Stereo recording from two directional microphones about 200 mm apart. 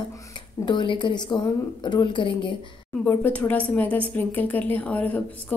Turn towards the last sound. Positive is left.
turn(degrees=10)  # may be behind; listen again after turning